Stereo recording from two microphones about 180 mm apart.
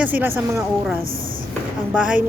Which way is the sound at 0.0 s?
10° right (ahead or behind).